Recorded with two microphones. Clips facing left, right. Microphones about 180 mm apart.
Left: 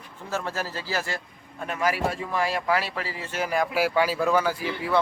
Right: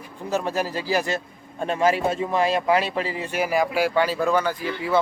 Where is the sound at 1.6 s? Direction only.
25° right (ahead or behind); by 3.6 s 10° right (ahead or behind).